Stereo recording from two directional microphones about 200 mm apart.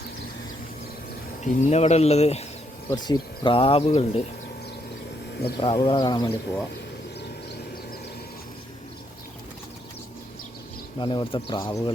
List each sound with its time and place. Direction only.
1.4 s speech: 35° left (ahead or behind)
2.9 s speech: 20° left (ahead or behind)
5.5 s speech: 25° left (ahead or behind)
10.9 s speech: 25° left (ahead or behind)